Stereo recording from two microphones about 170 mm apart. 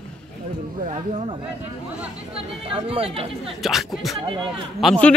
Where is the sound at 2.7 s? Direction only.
30° right (ahead or behind).